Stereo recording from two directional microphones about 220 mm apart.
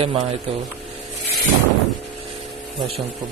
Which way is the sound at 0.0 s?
25° right (ahead or behind).